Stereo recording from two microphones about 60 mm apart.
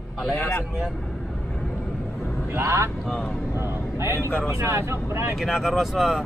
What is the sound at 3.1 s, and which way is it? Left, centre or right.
Speech, centre.